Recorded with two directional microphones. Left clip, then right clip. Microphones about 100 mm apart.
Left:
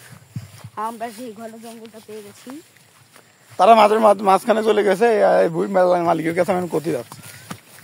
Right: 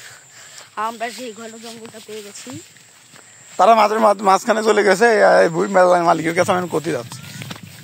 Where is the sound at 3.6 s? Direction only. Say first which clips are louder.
Left 1 dB; 65° right (ahead or behind); by 6.0 s 35° right (ahead or behind).